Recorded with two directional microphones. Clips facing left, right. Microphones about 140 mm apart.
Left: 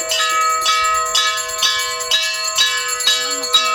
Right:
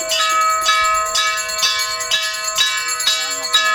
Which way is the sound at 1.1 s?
15° left (ahead or behind).